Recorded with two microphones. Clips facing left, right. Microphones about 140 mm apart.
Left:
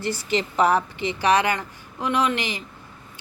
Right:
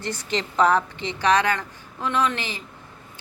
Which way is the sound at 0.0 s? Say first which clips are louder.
Left 3 dB; 5° left (ahead or behind).